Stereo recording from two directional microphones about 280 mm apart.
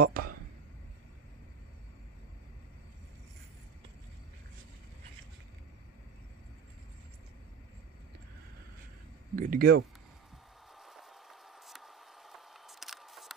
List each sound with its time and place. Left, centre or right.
0.0 s speech: right
9.3 s speech: right
10.8 s a sound: centre